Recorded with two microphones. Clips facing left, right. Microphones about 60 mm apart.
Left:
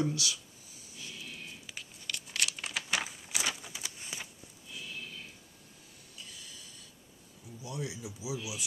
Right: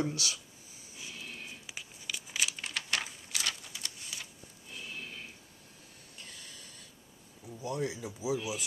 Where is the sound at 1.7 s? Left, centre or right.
Centre.